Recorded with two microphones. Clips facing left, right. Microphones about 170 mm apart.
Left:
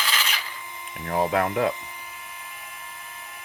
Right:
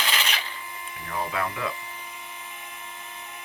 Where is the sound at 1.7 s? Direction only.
15° left (ahead or behind).